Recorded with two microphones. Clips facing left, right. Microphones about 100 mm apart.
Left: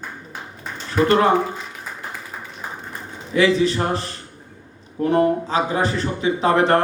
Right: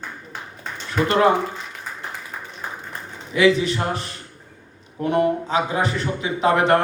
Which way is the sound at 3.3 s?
35° left (ahead or behind).